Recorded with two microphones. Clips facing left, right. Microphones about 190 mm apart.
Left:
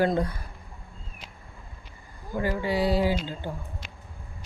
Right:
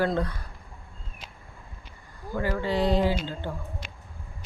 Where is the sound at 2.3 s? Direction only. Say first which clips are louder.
Even; 15° left (ahead or behind).